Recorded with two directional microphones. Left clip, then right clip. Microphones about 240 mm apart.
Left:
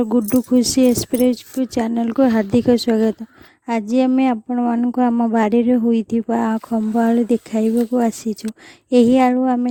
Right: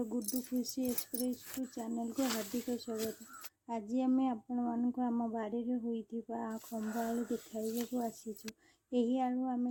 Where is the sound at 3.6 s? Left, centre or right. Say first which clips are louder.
Left 18 dB; left.